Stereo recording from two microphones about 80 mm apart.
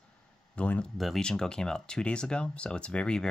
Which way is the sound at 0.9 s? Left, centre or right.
Centre.